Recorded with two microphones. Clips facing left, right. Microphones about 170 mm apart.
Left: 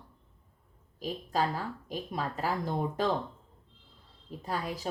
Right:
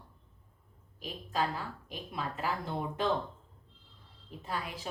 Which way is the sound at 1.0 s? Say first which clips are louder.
Left 3 dB; 40° left (ahead or behind).